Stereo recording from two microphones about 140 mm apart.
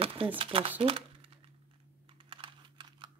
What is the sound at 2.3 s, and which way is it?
Computer keyboard, 35° right (ahead or behind).